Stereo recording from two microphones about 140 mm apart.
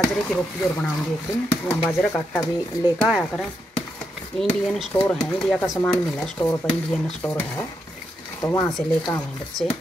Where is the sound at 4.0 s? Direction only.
Centre (ahead or behind).